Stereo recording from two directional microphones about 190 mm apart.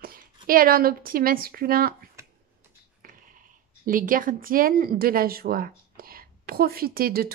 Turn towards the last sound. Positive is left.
turn(degrees=-50)  # may be behind; listen again after turning